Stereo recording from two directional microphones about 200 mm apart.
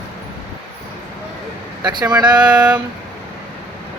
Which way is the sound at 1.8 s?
20° right (ahead or behind).